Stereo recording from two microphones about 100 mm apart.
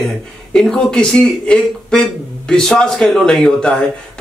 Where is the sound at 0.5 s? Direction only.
10° left (ahead or behind).